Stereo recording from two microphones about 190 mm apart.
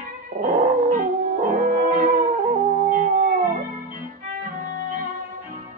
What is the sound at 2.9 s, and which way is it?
Howl, 45° right (ahead or behind).